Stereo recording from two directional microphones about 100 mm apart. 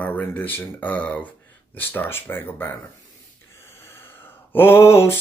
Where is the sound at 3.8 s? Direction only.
25° left (ahead or behind).